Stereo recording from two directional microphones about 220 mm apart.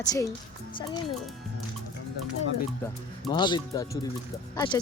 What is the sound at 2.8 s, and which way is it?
Speech, 20° left (ahead or behind).